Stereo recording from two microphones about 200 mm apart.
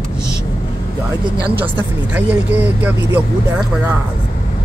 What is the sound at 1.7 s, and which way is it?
Speech, 10° right (ahead or behind).